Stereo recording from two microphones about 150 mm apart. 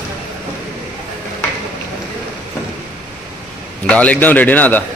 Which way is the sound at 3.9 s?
10° left (ahead or behind).